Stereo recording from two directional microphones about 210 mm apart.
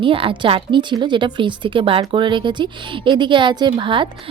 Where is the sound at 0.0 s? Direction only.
25° right (ahead or behind).